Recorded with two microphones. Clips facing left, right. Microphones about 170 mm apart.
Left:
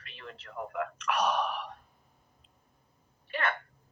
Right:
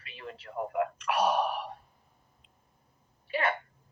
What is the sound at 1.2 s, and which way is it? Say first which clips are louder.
Speech: right 4 dB; 35° right (ahead or behind).